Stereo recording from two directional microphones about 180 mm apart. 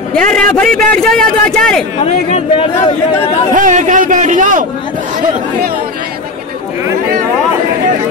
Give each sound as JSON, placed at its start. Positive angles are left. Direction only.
{"t": 0.4, "sound": "a man's voice", "side_deg": 5}
{"t": 2.0, "sound": "speech", "side_deg": 35}
{"t": 3.5, "sound": "a man's voice", "side_deg": -45}